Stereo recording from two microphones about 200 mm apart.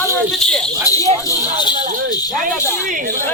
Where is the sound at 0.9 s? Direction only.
15° left (ahead or behind).